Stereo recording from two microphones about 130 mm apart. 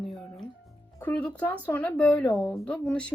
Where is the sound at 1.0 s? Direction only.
10° left (ahead or behind).